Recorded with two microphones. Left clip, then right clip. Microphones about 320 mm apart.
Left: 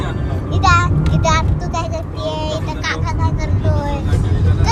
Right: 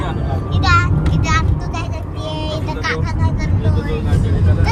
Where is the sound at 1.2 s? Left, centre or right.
Centre.